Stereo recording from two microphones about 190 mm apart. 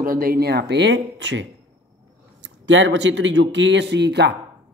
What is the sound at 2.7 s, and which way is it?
Speech, 80° right.